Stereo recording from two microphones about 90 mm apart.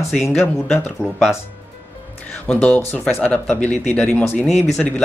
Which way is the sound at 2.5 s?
15° left (ahead or behind).